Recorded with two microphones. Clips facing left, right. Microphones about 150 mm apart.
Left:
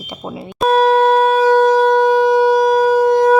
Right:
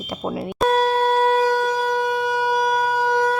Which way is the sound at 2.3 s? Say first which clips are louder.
Left 9 dB; 30° left (ahead or behind).